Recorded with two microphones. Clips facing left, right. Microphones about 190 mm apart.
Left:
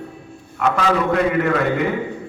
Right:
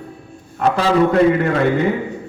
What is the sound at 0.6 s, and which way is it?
A man's voice, 35° right (ahead or behind).